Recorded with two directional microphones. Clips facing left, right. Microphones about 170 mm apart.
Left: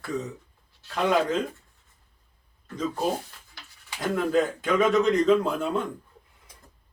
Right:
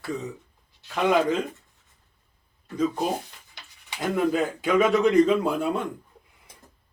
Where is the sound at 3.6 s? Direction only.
20° right (ahead or behind).